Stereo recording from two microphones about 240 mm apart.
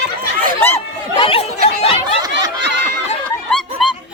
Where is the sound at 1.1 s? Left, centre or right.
Left.